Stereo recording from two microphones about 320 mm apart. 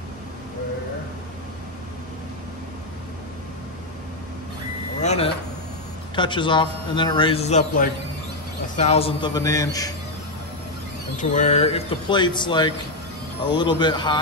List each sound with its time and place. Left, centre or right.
5.0 s a man's voice: centre
11.1 s a man's voice: left